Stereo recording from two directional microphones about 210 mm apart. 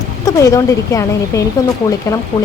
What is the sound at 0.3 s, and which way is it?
Speech, 15° left (ahead or behind).